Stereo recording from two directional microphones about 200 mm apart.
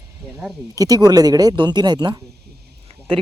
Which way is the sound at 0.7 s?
20° right (ahead or behind).